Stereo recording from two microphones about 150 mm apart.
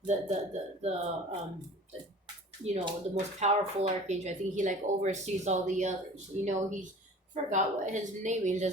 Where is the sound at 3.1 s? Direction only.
50° right (ahead or behind).